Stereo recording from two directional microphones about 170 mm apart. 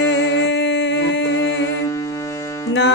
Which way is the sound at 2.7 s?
90° left.